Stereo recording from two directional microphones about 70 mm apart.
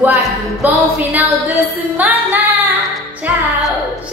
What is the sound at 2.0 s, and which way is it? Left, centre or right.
Music, right.